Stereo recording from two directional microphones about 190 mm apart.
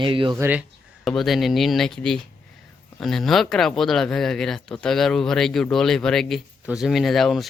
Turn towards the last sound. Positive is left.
turn(degrees=0)  # may be behind; listen again after turning